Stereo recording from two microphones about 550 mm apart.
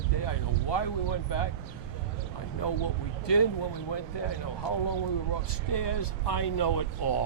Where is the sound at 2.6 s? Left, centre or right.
Left.